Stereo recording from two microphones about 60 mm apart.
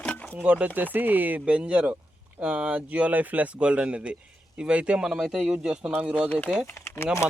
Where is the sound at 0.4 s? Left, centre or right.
Right.